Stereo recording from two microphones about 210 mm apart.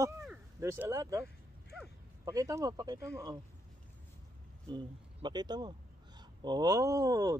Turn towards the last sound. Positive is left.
turn(degrees=-15)  # may be behind; listen again after turning